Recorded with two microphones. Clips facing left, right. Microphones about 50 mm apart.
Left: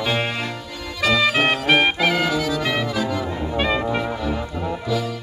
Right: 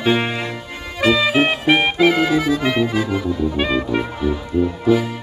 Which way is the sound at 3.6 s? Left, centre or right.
Centre.